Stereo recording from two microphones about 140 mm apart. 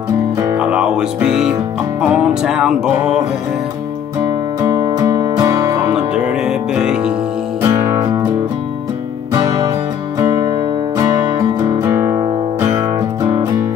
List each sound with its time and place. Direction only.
0.6 s speech: 5° right (ahead or behind)
2.0 s music: 5° right (ahead or behind)
4.6 s music: 25° right (ahead or behind)
5.9 s music: 5° right (ahead or behind)
7.6 s music: 25° right (ahead or behind)
10.1 s music: 25° right (ahead or behind)
13.2 s music: 25° right (ahead or behind)